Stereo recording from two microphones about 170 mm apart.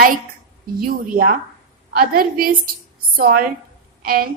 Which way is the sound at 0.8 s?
55° right (ahead or behind).